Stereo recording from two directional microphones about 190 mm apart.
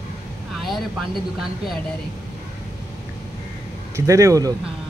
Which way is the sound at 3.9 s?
15° right (ahead or behind).